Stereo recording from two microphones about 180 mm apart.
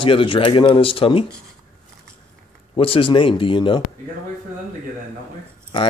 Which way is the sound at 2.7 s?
30° left (ahead or behind).